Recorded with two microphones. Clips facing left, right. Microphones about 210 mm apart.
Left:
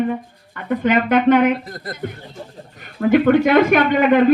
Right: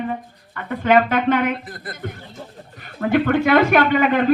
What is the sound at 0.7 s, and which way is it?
Speech, 50° left (ahead or behind).